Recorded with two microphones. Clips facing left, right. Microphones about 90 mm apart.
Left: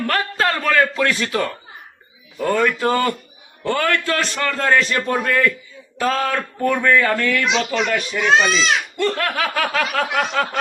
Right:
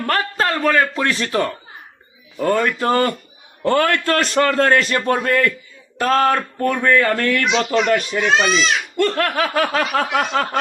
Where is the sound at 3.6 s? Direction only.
45° right (ahead or behind).